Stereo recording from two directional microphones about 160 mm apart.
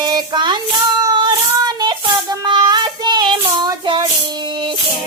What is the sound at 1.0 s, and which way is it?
Child singing, 25° right (ahead or behind).